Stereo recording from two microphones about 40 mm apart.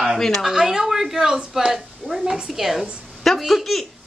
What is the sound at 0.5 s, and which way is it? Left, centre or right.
A woman's voice, centre.